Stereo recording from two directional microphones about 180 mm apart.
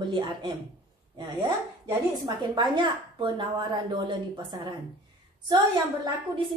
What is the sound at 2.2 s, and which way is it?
Speech, 25° right (ahead or behind).